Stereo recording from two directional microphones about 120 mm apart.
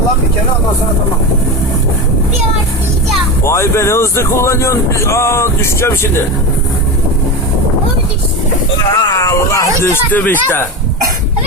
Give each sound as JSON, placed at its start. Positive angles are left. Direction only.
{"t": 3.4, "sound": "speech", "side_deg": 20}
{"t": 8.9, "sound": "speech", "side_deg": 35}